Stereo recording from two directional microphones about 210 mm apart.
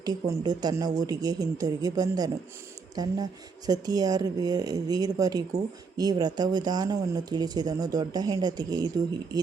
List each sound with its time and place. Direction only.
0.0 s speech: 20° right (ahead or behind)